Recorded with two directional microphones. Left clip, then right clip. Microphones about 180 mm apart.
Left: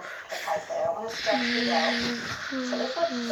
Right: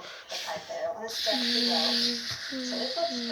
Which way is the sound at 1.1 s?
10° right (ahead or behind).